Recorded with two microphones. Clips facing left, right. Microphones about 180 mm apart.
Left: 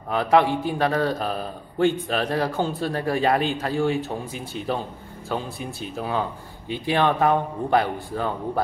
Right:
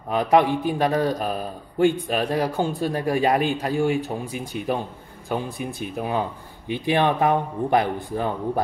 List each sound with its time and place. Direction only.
0.1 s a man's voice: 15° right (ahead or behind)